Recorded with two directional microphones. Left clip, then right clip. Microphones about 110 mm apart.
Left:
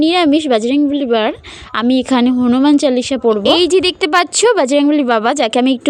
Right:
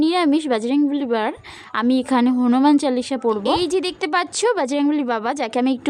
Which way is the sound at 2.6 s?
25° left (ahead or behind).